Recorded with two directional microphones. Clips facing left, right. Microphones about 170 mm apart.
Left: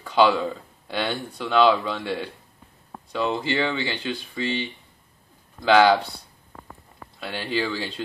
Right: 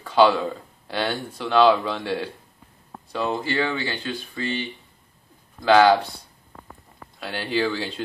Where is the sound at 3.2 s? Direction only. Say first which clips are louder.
Even; 20° left (ahead or behind).